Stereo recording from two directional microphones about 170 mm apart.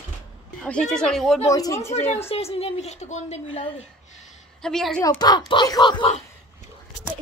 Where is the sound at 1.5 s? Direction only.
20° left (ahead or behind).